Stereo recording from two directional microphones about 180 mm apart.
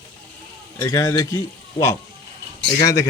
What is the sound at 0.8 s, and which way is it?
Speech, 15° left (ahead or behind).